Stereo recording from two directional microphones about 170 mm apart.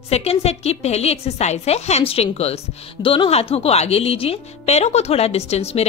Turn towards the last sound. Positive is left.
turn(degrees=40)  # may be behind; listen again after turning